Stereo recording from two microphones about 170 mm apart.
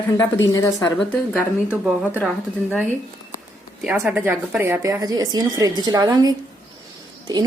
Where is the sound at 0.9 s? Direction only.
10° left (ahead or behind).